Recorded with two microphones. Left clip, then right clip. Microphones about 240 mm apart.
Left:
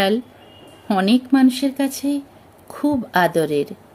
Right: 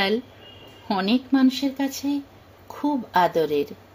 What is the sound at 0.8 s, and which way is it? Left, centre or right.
Speech, left.